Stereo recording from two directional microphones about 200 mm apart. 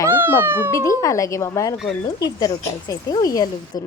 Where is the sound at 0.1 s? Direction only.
10° right (ahead or behind).